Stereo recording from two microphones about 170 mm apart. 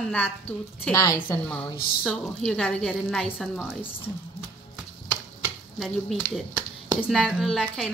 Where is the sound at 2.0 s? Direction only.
Centre (ahead or behind).